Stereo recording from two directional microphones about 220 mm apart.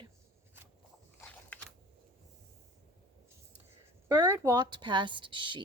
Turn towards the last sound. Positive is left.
turn(degrees=-20)  # may be behind; listen again after turning